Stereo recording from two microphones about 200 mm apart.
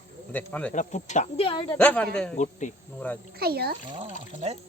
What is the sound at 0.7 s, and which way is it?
Speech, 35° left (ahead or behind).